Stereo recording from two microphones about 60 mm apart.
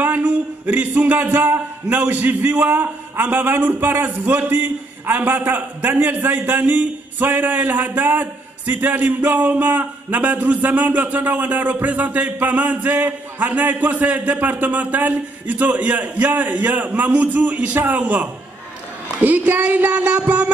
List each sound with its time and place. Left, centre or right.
0.0 s speech: right